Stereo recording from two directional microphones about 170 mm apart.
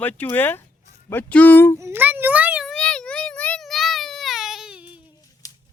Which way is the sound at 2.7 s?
5° left (ahead or behind).